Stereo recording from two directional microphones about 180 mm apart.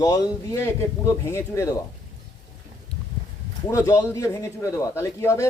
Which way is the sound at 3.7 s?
15° left (ahead or behind).